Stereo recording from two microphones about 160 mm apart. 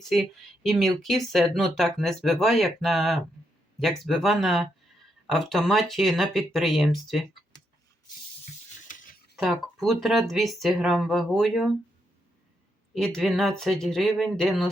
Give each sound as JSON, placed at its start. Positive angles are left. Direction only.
{"t": 0.0, "sound": "speech", "side_deg": 0}
{"t": 8.9, "sound": "a sound", "side_deg": 55}
{"t": 9.3, "sound": "speech", "side_deg": 0}
{"t": 12.9, "sound": "speech", "side_deg": 0}